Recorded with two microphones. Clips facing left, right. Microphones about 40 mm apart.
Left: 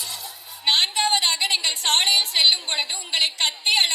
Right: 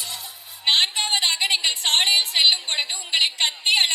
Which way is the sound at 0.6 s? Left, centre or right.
Right.